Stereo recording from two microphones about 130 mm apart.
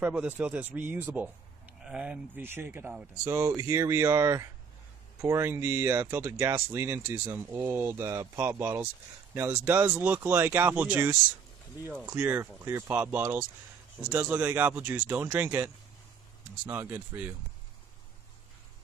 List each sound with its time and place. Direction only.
0.0 s speech: 10° right (ahead or behind)